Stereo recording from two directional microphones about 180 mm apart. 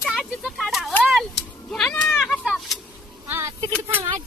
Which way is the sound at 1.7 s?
5° left (ahead or behind).